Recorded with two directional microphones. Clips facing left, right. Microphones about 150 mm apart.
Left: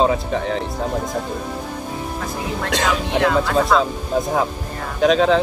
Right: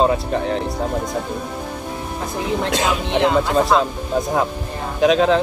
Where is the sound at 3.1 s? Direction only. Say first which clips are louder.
Right 2 dB; 20° right (ahead or behind).